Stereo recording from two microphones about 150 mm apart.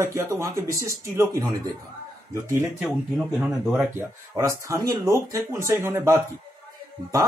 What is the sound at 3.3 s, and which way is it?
Speech, 5° right (ahead or behind).